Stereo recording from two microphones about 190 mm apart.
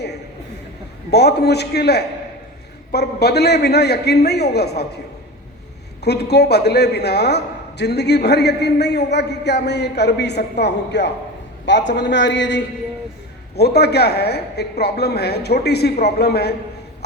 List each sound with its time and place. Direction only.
1.1 s a man's voice: 60° left (ahead or behind)
6.1 s a man's voice: 60° left (ahead or behind)